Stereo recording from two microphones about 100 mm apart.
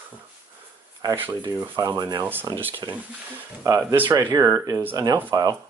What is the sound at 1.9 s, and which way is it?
Speech, 40° right (ahead or behind).